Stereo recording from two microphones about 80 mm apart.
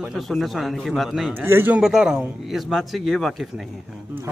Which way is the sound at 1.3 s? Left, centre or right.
Right.